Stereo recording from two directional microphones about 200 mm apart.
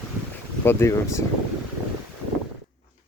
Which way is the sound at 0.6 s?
15° left (ahead or behind).